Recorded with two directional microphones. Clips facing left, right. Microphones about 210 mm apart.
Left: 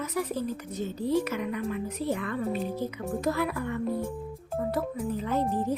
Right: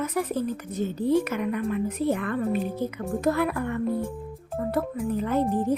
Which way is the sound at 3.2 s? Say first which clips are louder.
Right 5 dB; 55° right (ahead or behind).